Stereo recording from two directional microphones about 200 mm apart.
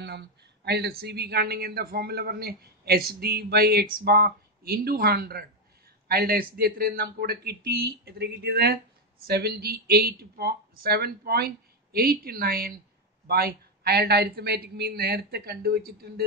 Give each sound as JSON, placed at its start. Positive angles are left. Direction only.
{"t": 0.0, "sound": "speech", "side_deg": -55}